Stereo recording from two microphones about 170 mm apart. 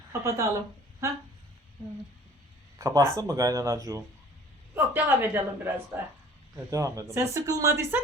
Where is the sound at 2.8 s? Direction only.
20° right (ahead or behind).